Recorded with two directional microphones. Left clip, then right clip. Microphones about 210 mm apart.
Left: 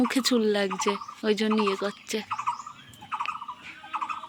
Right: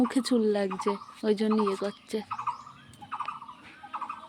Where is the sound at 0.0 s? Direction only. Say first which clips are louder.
Left 2 dB; 10° right (ahead or behind).